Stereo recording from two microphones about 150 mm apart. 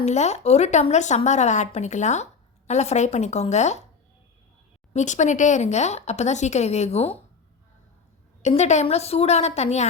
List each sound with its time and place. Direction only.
0.0 s a woman's voice: 50° left (ahead or behind)
4.9 s a woman's voice: 55° left (ahead or behind)
8.4 s a woman's voice: 50° left (ahead or behind)